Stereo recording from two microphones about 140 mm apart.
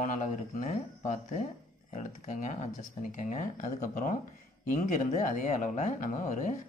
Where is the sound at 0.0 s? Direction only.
55° left (ahead or behind).